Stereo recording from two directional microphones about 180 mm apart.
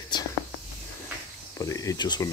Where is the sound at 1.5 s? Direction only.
20° left (ahead or behind).